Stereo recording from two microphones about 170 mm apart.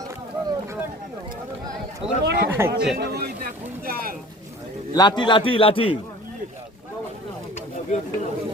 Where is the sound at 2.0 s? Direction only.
35° right (ahead or behind).